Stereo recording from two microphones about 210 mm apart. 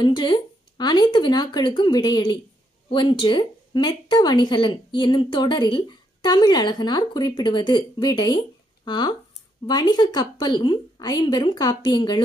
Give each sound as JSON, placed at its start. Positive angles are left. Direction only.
{"t": 0.0, "sound": "speech", "side_deg": 20}